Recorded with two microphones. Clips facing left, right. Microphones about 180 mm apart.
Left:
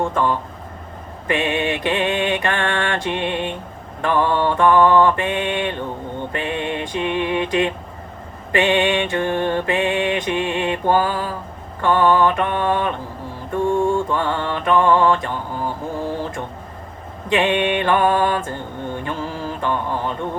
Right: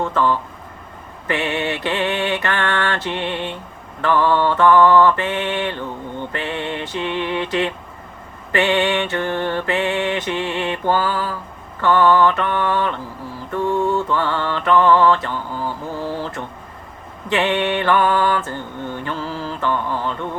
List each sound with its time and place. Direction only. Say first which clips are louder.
0.1 s mantra: right 1 dB; 20° left (ahead or behind)
6.3 s music: left 2 dB; 15° left (ahead or behind)
8.5 s mantra: left 1 dB; 15° left (ahead or behind)
13.8 s mantra: even; 50° left (ahead or behind)
14.2 s mantra: right 1 dB; 20° left (ahead or behind)